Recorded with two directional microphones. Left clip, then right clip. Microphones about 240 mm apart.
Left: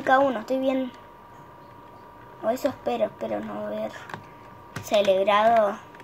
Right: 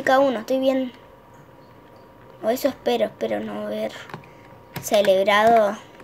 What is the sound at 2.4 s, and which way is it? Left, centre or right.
Speech, centre.